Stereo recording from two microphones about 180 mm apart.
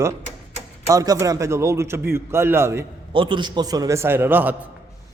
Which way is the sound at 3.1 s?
25° right (ahead or behind).